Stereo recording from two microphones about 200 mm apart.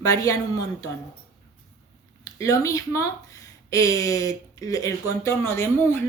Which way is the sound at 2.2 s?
15° left (ahead or behind).